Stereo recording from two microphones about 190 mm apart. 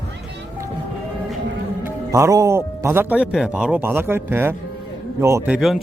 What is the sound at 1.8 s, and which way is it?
Speech, 15° right (ahead or behind).